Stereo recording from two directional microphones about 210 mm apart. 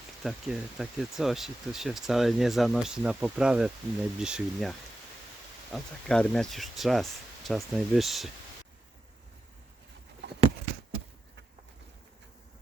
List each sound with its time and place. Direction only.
0.2 s speech: centre (ahead or behind)
5.7 s speech: 5° left (ahead or behind)